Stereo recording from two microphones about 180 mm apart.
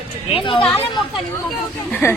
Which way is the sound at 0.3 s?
30° left (ahead or behind).